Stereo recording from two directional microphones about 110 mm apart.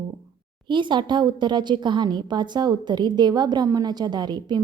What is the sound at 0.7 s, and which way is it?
A woman's voice, 45° right (ahead or behind).